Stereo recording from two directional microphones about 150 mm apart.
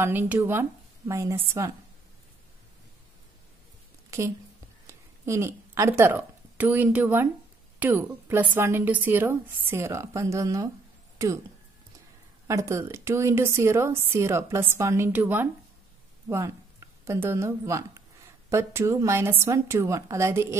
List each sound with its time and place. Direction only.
0.0 s a woman's voice: 15° right (ahead or behind)
4.1 s a woman's voice: 20° right (ahead or behind)
12.4 s a woman's voice: 20° right (ahead or behind)